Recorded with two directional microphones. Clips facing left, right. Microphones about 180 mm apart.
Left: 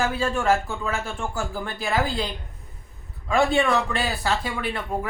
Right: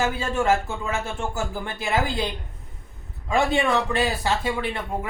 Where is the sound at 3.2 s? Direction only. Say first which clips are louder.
Left 1 dB; 20° right (ahead or behind).